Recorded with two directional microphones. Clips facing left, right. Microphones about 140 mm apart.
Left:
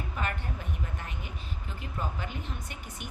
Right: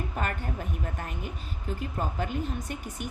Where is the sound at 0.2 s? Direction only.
45° right (ahead or behind).